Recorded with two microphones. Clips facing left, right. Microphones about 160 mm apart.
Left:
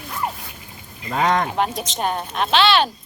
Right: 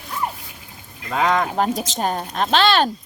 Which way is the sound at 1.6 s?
40° right (ahead or behind).